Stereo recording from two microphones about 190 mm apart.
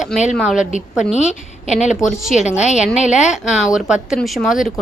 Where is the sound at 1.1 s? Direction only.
35° left (ahead or behind).